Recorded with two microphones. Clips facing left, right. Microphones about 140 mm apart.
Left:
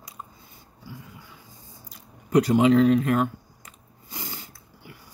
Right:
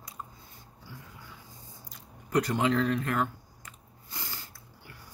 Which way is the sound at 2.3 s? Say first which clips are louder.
Left 8 dB; 15° left (ahead or behind).